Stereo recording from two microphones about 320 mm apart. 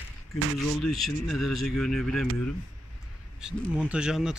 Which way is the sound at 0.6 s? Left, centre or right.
Centre.